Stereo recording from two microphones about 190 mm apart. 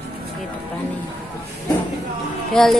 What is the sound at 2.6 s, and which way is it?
Music, 5° left (ahead or behind).